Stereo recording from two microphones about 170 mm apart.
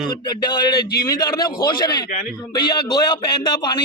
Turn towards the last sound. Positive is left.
turn(degrees=25)  # may be behind; listen again after turning